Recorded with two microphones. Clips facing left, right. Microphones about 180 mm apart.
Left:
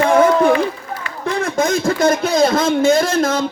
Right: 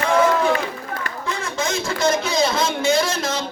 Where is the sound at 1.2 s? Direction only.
55° left (ahead or behind).